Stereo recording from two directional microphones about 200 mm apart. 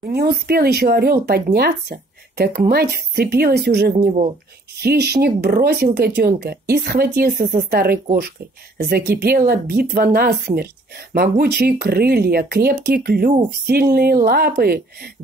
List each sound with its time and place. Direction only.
0.0 s speech: 50° right (ahead or behind)